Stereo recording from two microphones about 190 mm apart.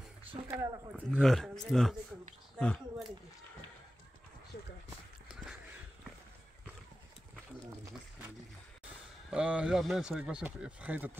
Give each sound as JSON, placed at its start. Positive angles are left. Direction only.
{"t": 0.5, "sound": "speech", "side_deg": -15}
{"t": 1.1, "sound": "speech", "side_deg": 0}
{"t": 5.3, "sound": "a sound", "side_deg": -5}
{"t": 9.3, "sound": "speech", "side_deg": -5}